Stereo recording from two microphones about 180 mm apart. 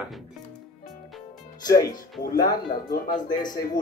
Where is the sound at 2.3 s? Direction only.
20° left (ahead or behind).